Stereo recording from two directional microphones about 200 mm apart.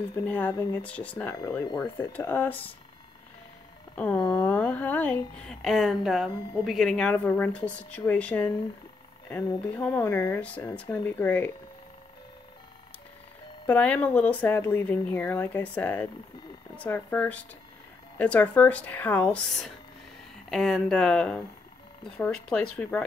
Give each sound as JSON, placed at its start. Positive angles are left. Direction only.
{"t": 0.1, "sound": "speech", "side_deg": 15}
{"t": 3.9, "sound": "speech", "side_deg": 5}
{"t": 4.2, "sound": "speech", "side_deg": 20}
{"t": 4.5, "sound": "speech", "side_deg": 5}
{"t": 9.7, "sound": "speech", "side_deg": 5}
{"t": 13.7, "sound": "speech", "side_deg": 5}